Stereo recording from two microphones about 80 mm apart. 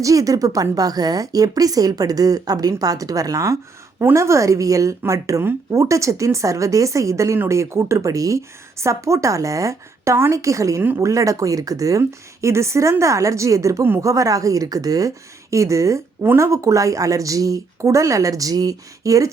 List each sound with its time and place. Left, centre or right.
0.0 s a woman's voice: right